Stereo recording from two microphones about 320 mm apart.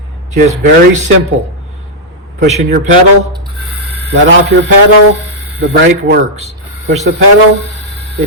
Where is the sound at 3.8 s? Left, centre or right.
Right.